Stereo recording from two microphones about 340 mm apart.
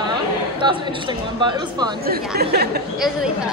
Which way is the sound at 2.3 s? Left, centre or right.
Right.